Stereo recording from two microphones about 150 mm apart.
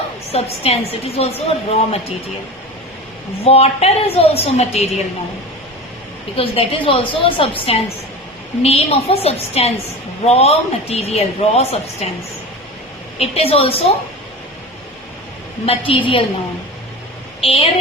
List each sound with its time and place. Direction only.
0.3 s a woman's voice: 40° left (ahead or behind)
3.4 s a woman's voice: 40° left (ahead or behind)
6.3 s a woman's voice: 35° left (ahead or behind)
13.1 s a woman's voice: 40° left (ahead or behind)
15.6 s a woman's voice: 40° left (ahead or behind)
17.4 s speech: 40° left (ahead or behind)